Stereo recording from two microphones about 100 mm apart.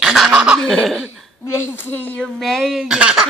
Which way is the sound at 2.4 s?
5° left (ahead or behind).